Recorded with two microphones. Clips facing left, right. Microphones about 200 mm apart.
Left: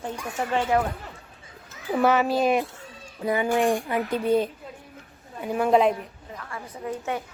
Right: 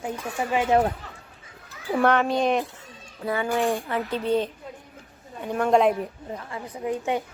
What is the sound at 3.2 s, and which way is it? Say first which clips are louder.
Speech: left 2 dB; 15° left (ahead or behind).